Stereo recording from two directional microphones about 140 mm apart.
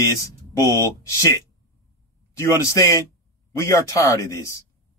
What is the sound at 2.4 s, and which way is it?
Speech, 25° left (ahead or behind).